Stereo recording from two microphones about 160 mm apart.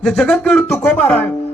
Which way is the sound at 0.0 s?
5° left (ahead or behind).